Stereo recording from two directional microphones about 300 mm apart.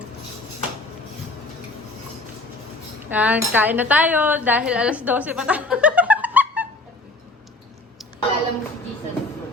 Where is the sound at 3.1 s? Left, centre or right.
Centre.